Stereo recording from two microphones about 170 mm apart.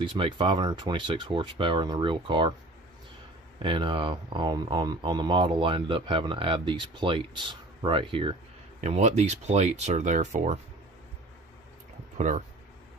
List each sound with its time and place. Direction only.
0.0 s speech: 30° right (ahead or behind)
3.6 s speech: 30° right (ahead or behind)
8.8 s speech: 40° right (ahead or behind)
12.2 s speech: 45° right (ahead or behind)